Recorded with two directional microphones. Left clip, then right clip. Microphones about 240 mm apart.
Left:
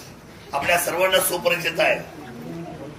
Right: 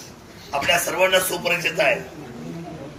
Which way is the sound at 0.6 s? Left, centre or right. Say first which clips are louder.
Right 1 dB; centre.